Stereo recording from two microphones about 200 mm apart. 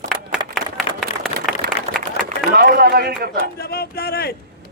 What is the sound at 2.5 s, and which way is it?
Speech, 50° right (ahead or behind).